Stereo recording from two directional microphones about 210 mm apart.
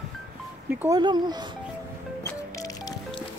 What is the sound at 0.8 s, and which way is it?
Speech, 20° right (ahead or behind).